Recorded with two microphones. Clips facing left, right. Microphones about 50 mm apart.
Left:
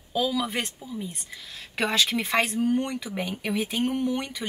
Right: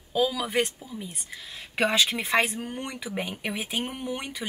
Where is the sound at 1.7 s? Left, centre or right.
Right.